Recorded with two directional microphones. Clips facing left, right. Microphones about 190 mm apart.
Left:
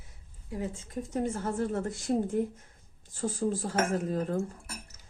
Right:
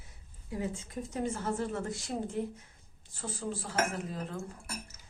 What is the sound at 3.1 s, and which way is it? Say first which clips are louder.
Speech: left 8 dB; 45° left (ahead or behind).